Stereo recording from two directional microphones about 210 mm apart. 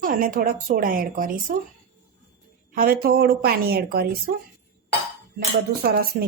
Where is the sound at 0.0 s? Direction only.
40° right (ahead or behind).